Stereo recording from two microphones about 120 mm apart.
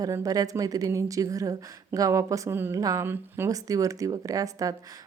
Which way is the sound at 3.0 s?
20° right (ahead or behind).